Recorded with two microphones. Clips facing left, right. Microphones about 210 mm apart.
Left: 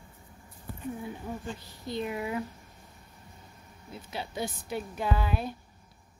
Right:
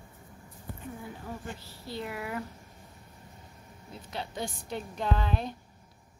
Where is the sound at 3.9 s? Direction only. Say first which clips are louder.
Left 1 dB; 5° left (ahead or behind).